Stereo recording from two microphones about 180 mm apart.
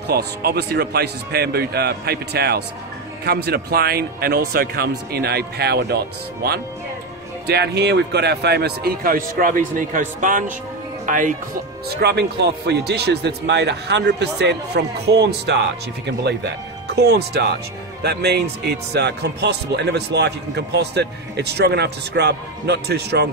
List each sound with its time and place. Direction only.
0.1 s speech: 60° right (ahead or behind)
7.4 s speech: 65° right (ahead or behind); by 11.3 s 45° right (ahead or behind)
12.0 s a man's voice: 65° right (ahead or behind)